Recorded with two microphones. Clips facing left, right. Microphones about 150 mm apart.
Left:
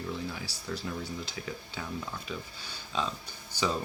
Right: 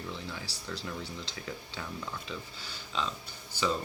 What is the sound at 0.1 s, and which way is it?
Speech, 15° left (ahead or behind).